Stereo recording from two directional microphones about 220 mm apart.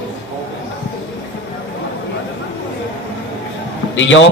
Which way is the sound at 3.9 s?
60° left (ahead or behind).